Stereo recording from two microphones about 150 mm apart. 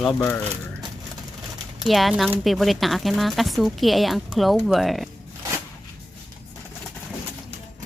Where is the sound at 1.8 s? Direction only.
Centre (ahead or behind).